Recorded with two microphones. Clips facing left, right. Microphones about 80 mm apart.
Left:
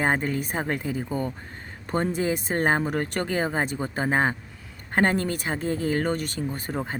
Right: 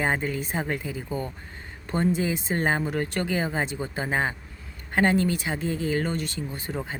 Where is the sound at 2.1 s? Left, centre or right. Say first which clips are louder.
Left 1 dB; left.